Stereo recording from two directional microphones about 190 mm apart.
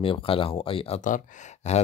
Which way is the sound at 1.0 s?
40° left (ahead or behind).